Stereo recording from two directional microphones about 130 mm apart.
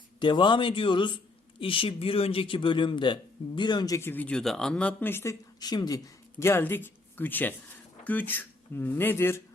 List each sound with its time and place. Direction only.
0.2 s a man's voice: 35° left (ahead or behind)
6.4 s speech: 20° left (ahead or behind)